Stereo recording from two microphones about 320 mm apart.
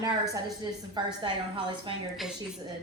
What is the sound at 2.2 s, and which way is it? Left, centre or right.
Speech, centre.